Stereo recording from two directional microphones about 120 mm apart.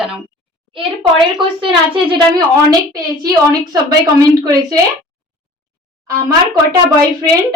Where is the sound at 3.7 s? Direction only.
30° right (ahead or behind).